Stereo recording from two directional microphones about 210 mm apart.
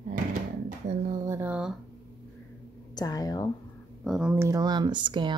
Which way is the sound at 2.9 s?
15° left (ahead or behind).